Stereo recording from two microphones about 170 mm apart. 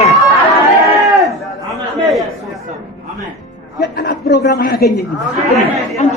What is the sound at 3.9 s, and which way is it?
Speech, 65° left (ahead or behind).